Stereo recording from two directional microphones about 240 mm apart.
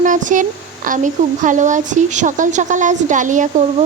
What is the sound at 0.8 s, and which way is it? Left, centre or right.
Speech, right.